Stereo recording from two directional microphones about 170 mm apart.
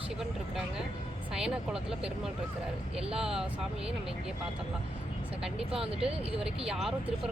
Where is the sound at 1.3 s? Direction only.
5° right (ahead or behind).